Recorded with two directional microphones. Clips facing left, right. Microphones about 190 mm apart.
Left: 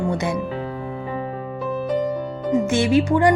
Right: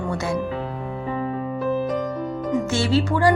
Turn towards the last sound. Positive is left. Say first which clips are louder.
# left 3 dB
turn(degrees=15)  # may be behind; listen again after turning